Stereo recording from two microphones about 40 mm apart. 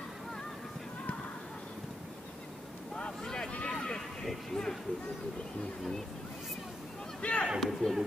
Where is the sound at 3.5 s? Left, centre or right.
Left.